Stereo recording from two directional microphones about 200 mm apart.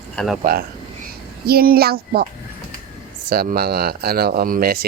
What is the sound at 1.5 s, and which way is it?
Speech, 50° right (ahead or behind).